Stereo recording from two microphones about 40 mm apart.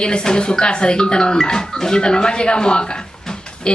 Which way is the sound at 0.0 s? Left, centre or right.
Left.